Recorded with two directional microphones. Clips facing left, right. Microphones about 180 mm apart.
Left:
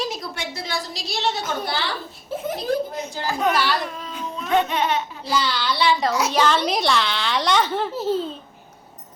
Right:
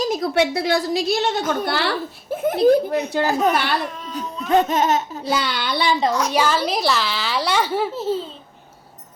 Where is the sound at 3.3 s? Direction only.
40° right (ahead or behind).